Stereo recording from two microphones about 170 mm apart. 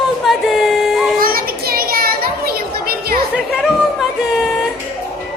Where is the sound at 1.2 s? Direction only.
60° right (ahead or behind).